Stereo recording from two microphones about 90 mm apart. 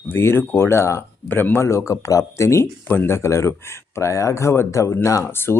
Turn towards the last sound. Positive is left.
turn(degrees=25)  # may be behind; listen again after turning